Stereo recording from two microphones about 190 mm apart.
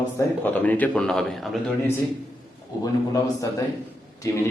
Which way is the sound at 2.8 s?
20° left (ahead or behind).